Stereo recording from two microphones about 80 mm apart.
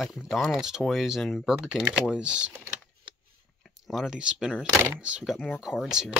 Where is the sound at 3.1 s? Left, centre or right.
Right.